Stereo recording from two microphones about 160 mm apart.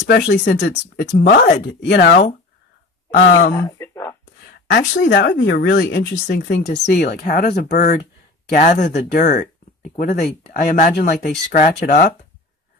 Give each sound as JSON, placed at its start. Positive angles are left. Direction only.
{"t": 0.0, "sound": "speech", "side_deg": 85}
{"t": 3.5, "sound": "a sound", "side_deg": 15}
{"t": 4.7, "sound": "speech", "side_deg": 90}
{"t": 8.5, "sound": "speech", "side_deg": 50}